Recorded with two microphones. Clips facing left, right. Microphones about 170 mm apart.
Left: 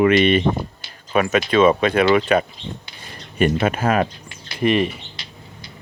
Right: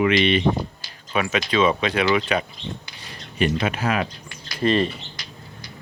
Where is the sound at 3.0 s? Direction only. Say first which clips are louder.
Left 4 dB; 50° left (ahead or behind).